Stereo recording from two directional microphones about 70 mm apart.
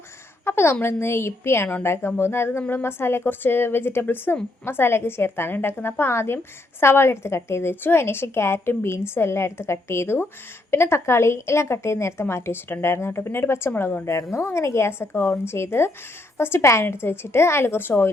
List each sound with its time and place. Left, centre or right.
0.4 s a woman's voice: left